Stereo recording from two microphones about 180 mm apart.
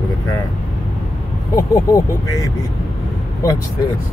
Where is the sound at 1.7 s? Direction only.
20° left (ahead or behind).